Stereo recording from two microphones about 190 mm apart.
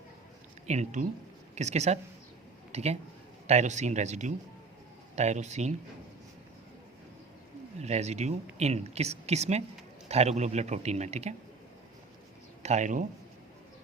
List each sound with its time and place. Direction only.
0.7 s speech: 40° right (ahead or behind)
7.8 s speech: 35° right (ahead or behind)
12.6 s speech: 40° right (ahead or behind)